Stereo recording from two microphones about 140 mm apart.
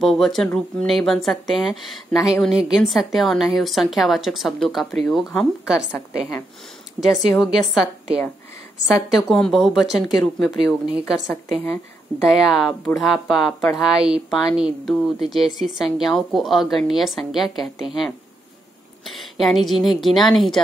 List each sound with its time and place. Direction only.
0.0 s speech: centre (ahead or behind)
7.1 s speech: centre (ahead or behind)
8.8 s speech: centre (ahead or behind)